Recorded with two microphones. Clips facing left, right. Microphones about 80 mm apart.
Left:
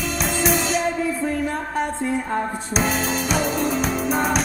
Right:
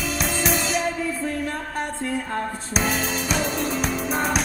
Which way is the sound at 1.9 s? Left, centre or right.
Centre.